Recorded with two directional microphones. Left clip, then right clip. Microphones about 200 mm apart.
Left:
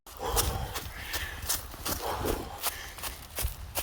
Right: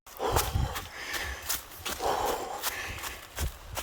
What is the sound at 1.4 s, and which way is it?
Horse, 45° left (ahead or behind).